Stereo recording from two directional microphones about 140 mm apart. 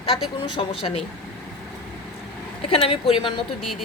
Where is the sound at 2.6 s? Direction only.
40° left (ahead or behind).